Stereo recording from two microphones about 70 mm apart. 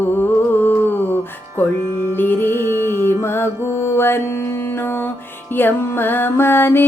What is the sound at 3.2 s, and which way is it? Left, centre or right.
Music, left.